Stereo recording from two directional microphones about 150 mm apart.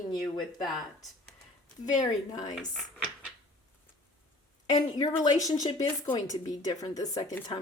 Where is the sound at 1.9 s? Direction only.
25° left (ahead or behind).